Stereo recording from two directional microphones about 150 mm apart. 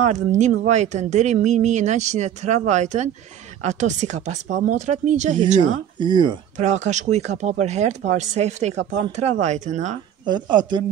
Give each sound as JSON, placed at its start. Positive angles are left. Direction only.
{"t": 0.0, "sound": "speech", "side_deg": -50}
{"t": 5.9, "sound": "speech", "side_deg": -30}
{"t": 6.5, "sound": "speech", "side_deg": -50}
{"t": 10.2, "sound": "speech", "side_deg": -30}